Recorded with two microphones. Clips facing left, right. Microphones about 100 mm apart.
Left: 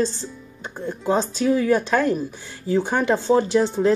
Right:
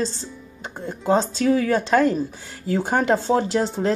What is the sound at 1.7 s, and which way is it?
Speech, 30° right (ahead or behind).